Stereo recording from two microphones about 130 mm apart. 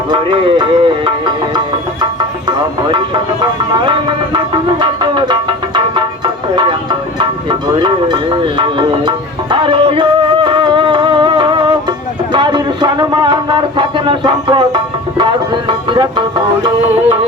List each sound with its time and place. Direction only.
0.1 s music: 40° right (ahead or behind)
3.4 s music: 35° right (ahead or behind)